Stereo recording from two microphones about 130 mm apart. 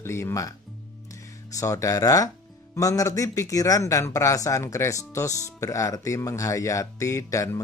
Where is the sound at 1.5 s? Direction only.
25° left (ahead or behind).